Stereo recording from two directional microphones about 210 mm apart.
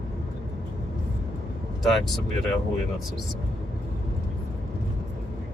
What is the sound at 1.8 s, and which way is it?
Speech, centre (ahead or behind).